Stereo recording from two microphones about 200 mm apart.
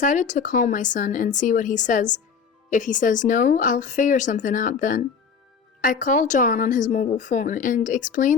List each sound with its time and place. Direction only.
0.0 s a woman's voice: 40° left (ahead or behind)